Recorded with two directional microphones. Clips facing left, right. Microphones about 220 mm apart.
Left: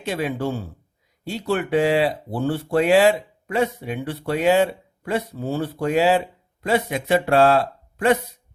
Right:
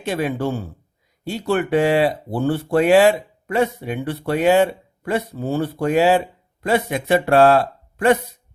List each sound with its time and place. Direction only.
0.0 s speech: 50° right (ahead or behind)